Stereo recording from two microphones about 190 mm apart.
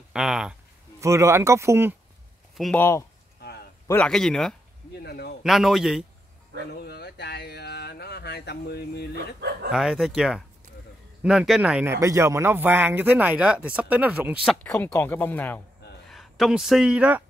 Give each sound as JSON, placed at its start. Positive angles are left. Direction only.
{"t": 0.1, "sound": "a man's voice", "side_deg": 0}
{"t": 1.0, "sound": "speech", "side_deg": -15}
{"t": 2.5, "sound": "speech", "side_deg": 0}
{"t": 2.8, "sound": "a man's voice", "side_deg": 15}
{"t": 5.0, "sound": "a man's voice", "side_deg": 55}
{"t": 5.4, "sound": "a man's voice", "side_deg": 0}
{"t": 6.7, "sound": "a sound", "side_deg": 60}
{"t": 9.1, "sound": "speech", "side_deg": -60}
{"t": 9.7, "sound": "a man's voice", "side_deg": 0}
{"t": 14.6, "sound": "speech", "side_deg": 5}